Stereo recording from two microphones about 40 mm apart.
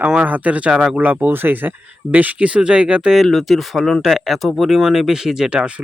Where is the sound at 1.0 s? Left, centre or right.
Right.